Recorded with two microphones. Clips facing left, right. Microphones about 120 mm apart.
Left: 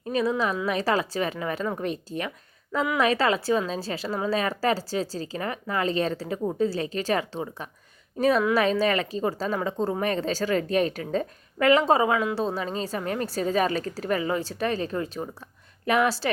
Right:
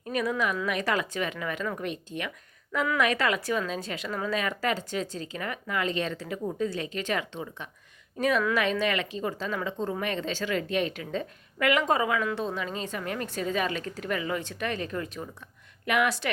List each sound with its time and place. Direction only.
0.0 s speech: 25° left (ahead or behind)